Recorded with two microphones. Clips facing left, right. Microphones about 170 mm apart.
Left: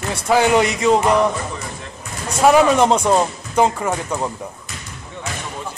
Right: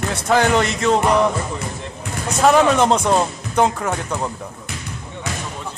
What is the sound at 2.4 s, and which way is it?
Speech, 5° left (ahead or behind).